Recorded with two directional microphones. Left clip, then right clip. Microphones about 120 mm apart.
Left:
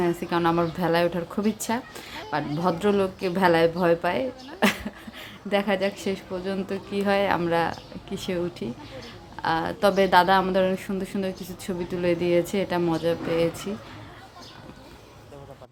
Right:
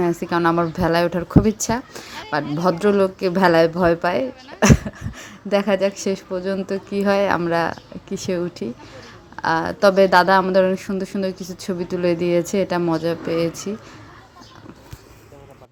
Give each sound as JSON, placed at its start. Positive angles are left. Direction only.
{"t": 0.0, "sound": "a woman's voice", "side_deg": -45}